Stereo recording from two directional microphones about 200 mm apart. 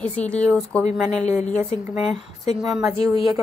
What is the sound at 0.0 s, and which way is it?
Speech, 5° left (ahead or behind).